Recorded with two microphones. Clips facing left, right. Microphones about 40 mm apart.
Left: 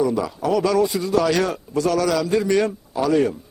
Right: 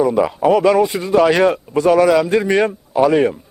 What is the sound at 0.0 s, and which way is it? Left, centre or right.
A man's voice, right.